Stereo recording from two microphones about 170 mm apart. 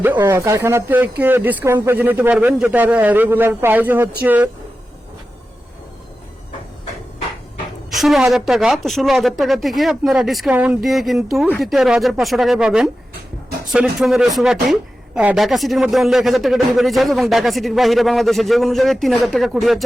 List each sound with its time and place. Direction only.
0.2 s a man's voice: 15° right (ahead or behind)
7.9 s a woman's voice: centre (ahead or behind)